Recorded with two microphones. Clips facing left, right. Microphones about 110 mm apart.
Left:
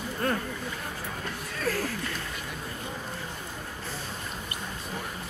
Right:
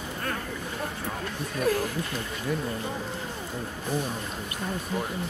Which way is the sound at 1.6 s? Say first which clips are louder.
Right 4 dB; 20° right (ahead or behind).